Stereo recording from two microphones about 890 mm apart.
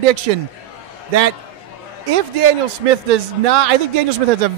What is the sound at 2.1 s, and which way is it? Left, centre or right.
A man's voice, right.